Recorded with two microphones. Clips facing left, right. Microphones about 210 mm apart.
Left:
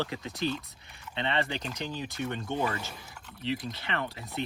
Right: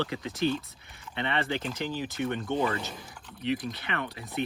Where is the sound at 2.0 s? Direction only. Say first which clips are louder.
Right 3 dB; 20° right (ahead or behind).